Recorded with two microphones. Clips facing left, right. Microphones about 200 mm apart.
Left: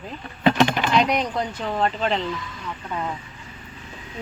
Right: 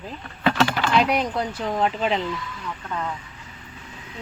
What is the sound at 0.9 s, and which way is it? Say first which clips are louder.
Speech: right 1 dB; 5° right (ahead or behind).